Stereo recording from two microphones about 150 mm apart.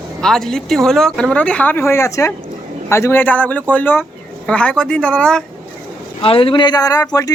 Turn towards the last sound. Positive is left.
turn(degrees=25)  # may be behind; listen again after turning